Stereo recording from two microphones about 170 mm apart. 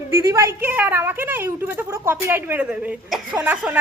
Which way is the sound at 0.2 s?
15° right (ahead or behind).